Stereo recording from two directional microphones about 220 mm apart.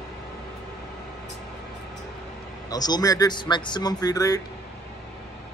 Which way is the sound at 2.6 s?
20° left (ahead or behind).